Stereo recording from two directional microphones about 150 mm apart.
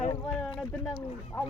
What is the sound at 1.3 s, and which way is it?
Speech, 10° left (ahead or behind).